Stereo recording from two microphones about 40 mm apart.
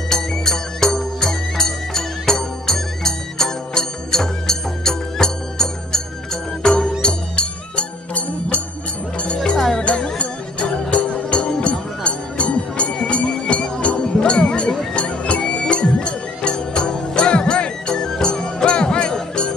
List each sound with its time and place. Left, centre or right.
0.1 s music: centre; by 8.5 s left
10.1 s music: left
12.0 s music: left